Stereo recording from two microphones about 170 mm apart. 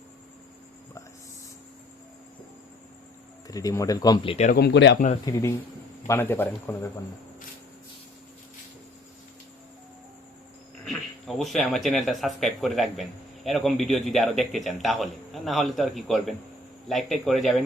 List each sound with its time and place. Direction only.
3.4 s speech: 20° left (ahead or behind)
4.5 s speech: 80° left
5.2 s speech: 15° left (ahead or behind)
10.8 s speech: centre (ahead or behind)